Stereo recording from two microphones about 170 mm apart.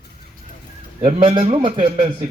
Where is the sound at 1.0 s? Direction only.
30° right (ahead or behind).